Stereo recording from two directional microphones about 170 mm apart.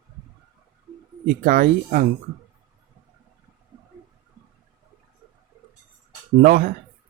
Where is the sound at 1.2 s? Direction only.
55° right (ahead or behind).